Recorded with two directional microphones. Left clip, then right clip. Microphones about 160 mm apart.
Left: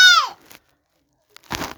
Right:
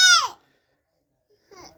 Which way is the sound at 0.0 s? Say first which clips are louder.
Left 4 dB; 5° right (ahead or behind).